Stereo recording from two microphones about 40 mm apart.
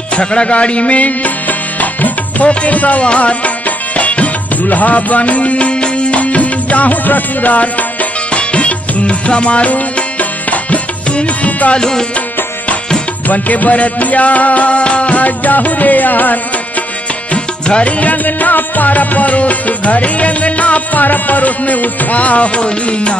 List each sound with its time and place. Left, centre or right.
0.1 s music: left
11.7 s tabla: centre
13.3 s music: left
17.3 s music: left
18.0 s music: left